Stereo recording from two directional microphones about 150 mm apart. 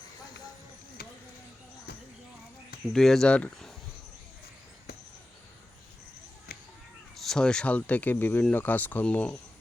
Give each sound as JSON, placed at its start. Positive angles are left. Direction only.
{"t": 1.0, "sound": "a sound", "side_deg": 90}
{"t": 2.9, "sound": "speech", "side_deg": 0}
{"t": 7.2, "sound": "speech", "side_deg": 5}